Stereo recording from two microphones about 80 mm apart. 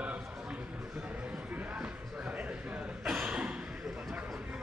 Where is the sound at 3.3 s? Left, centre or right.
Centre.